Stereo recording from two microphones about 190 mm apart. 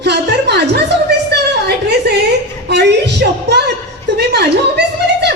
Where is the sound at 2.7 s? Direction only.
65° right (ahead or behind).